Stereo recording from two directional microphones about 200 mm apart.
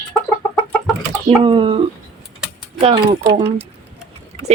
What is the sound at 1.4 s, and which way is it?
Speech, 25° right (ahead or behind).